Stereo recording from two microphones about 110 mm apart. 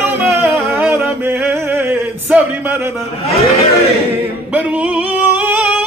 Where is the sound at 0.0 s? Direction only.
15° right (ahead or behind).